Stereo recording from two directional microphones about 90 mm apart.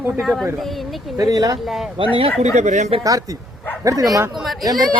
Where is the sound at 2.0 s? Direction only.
70° right (ahead or behind).